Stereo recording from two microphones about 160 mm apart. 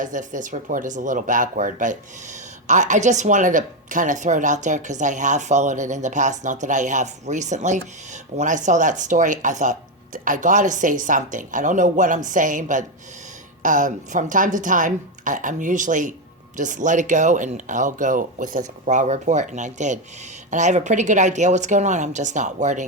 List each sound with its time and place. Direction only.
0.0 s speech: 50° right (ahead or behind)
18.9 s speech: 45° right (ahead or behind)